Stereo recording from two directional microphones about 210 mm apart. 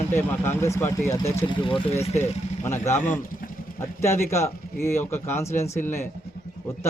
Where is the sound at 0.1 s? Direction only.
10° left (ahead or behind); by 2.3 s 30° left (ahead or behind).